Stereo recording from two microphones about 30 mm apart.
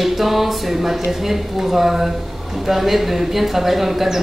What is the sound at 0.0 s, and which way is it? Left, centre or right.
Speech, centre.